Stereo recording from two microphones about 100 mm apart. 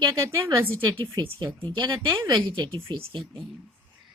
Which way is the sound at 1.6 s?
45° right (ahead or behind).